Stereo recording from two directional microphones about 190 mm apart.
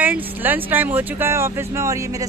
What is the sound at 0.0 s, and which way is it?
Speech, 10° right (ahead or behind).